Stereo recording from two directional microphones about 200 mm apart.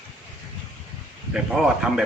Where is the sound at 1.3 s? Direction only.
5° right (ahead or behind).